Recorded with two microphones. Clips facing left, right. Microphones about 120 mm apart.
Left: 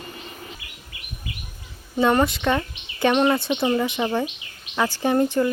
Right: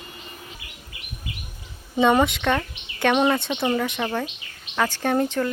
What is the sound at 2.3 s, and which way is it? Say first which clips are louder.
Speech: left 1 dB; 5° left (ahead or behind).